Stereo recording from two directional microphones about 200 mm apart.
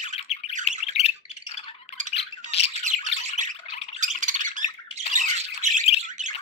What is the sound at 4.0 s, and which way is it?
Squawk, 40° right (ahead or behind).